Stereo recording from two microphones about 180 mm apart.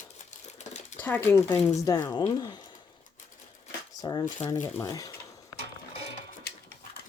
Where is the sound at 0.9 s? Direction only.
10° left (ahead or behind).